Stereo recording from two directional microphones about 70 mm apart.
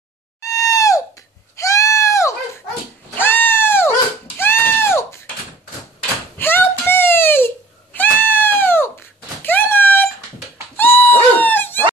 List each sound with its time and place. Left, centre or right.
0.4 s screaming: left
1.6 s goat: left
3.2 s goat: left
4.4 s a sound: left
6.3 s crying: left
9.4 s a sound: left
10.8 s dog: left